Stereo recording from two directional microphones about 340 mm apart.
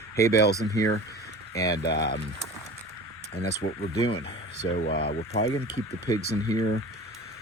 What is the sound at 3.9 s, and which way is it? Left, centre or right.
Speech, centre.